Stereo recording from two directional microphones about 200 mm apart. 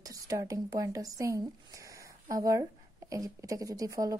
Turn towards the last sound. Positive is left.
turn(degrees=-15)  # may be behind; listen again after turning